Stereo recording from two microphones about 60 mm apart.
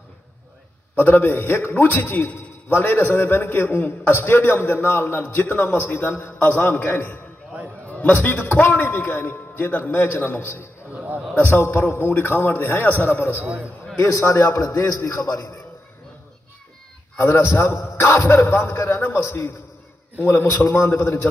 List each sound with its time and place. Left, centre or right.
0.9 s a man's voice: left
6.7 s a man's voice: left
8.7 s a man's voice: left
12.0 s a man's voice: left
13.9 s a man's voice: left
15.0 s a man's voice: left
15.2 s a man's voice: left
17.2 s a man's voice: left
20.2 s a man's voice: left
20.4 s a man's voice: left
20.9 s a man's voice: left